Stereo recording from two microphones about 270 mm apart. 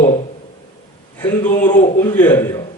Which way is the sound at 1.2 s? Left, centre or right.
Centre.